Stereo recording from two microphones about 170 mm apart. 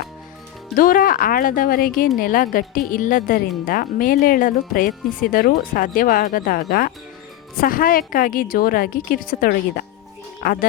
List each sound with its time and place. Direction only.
0.8 s a woman's voice: 55° left (ahead or behind)